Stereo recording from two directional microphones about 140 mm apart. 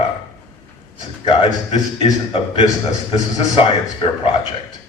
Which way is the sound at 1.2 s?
45° left (ahead or behind).